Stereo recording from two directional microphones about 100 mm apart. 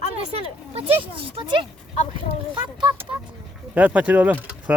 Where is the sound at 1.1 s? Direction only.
55° right (ahead or behind).